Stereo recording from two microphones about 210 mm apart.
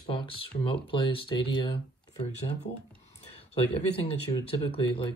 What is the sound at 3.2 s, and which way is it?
Speech, 25° left (ahead or behind).